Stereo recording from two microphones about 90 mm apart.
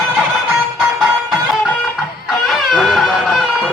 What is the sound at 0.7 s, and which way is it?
Music, centre (ahead or behind).